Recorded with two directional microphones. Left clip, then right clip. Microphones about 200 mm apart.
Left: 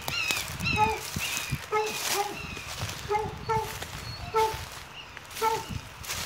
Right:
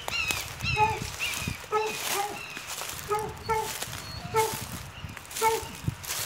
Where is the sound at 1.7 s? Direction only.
5° left (ahead or behind).